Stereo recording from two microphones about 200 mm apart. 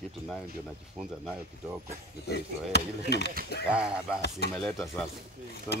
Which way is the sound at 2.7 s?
55° left (ahead or behind).